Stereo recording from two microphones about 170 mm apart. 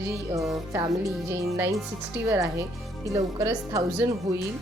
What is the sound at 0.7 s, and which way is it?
A woman's voice, 15° right (ahead or behind).